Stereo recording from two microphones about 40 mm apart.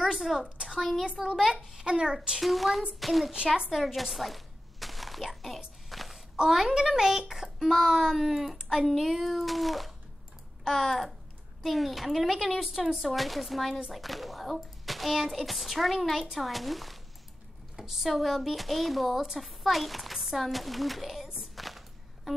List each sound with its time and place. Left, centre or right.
0.0 s a woman's voice: centre
0.7 s a child's voice: centre
1.7 s a child's voice: centre
2.4 s speech: centre
3.7 s a sound: centre
6.3 s a child's voice: centre